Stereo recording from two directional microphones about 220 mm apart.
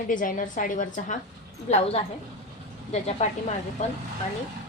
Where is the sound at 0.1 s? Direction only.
35° left (ahead or behind).